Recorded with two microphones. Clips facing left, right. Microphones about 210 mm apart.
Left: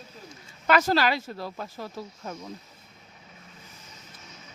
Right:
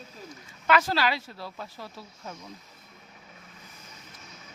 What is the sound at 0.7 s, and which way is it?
Speech, 45° left (ahead or behind).